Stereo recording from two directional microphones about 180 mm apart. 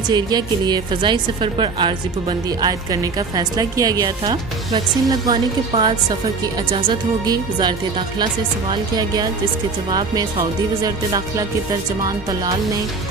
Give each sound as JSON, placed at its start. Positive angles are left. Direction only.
{"t": 0.1, "sound": "a woman's voice", "side_deg": -25}
{"t": 10.8, "sound": "a woman's voice", "side_deg": -20}